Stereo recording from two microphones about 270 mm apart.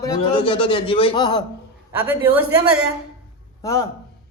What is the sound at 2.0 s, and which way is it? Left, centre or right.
Speech, centre.